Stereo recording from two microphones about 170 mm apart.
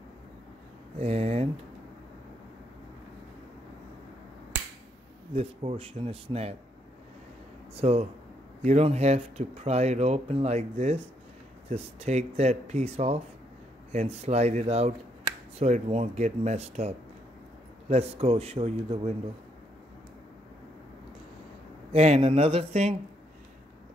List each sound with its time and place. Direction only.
0.9 s speech: 40° right (ahead or behind)
5.3 s speech: 35° right (ahead or behind)
7.7 s speech: 35° right (ahead or behind)
21.9 s speech: 40° right (ahead or behind)